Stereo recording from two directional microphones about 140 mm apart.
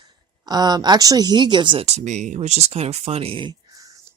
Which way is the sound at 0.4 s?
30° right (ahead or behind).